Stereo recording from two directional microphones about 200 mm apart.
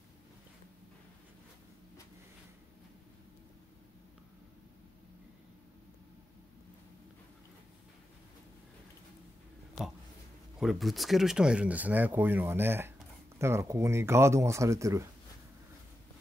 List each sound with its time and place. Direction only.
10.6 s speech: centre (ahead or behind)